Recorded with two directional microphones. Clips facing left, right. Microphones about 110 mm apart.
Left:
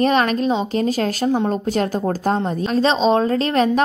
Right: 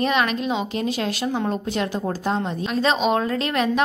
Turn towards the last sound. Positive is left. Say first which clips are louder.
# left 5 dB
turn(degrees=35)  # may be behind; listen again after turning